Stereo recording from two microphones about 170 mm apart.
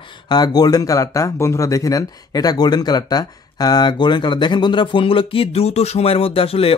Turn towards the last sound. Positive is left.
turn(degrees=35)  # may be behind; listen again after turning